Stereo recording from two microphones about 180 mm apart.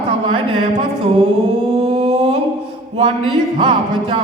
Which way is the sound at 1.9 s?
35° right (ahead or behind).